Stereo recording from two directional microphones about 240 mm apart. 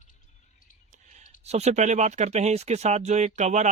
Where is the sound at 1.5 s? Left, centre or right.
Right.